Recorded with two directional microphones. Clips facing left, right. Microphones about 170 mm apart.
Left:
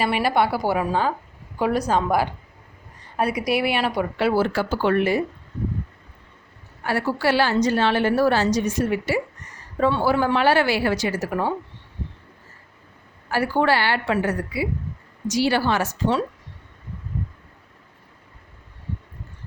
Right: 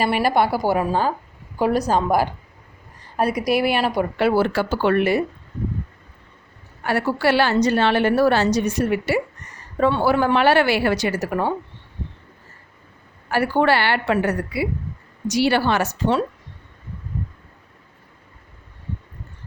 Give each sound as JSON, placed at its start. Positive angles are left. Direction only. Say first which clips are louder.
{"t": 0.0, "sound": "a woman's voice", "louder": "right 2 dB", "side_deg": -45}
{"t": 4.2, "sound": "a woman's voice", "louder": "right 2 dB", "side_deg": -60}
{"t": 6.8, "sound": "a woman's voice", "louder": "right 2 dB", "side_deg": -65}
{"t": 13.3, "sound": "a woman's voice", "louder": "right 2 dB", "side_deg": -60}